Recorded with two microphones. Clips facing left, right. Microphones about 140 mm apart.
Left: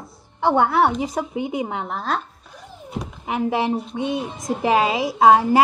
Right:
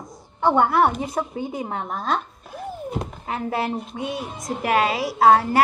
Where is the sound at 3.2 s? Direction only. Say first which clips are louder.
Left 5 dB; 15° left (ahead or behind).